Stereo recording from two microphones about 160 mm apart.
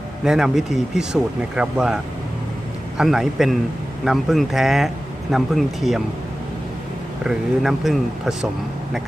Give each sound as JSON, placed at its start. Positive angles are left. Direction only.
{"t": 0.3, "sound": "speech", "side_deg": -5}
{"t": 3.0, "sound": "speech", "side_deg": 0}
{"t": 7.3, "sound": "speech", "side_deg": 0}